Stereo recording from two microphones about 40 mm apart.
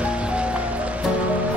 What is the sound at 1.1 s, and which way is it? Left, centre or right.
Music, right.